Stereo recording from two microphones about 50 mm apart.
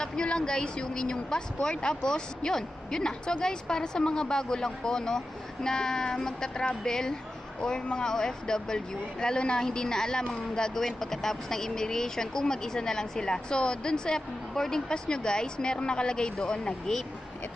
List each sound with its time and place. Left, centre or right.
0.0 s speech: centre